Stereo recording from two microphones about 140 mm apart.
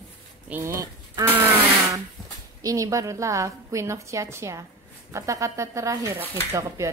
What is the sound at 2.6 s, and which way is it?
Speech, 25° right (ahead or behind).